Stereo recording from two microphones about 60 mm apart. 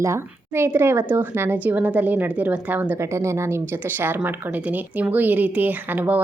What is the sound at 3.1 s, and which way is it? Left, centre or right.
Speech, right.